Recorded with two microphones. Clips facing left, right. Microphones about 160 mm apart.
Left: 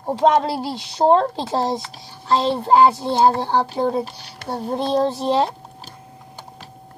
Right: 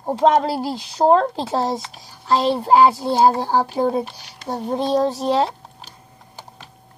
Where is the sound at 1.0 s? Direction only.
5° right (ahead or behind).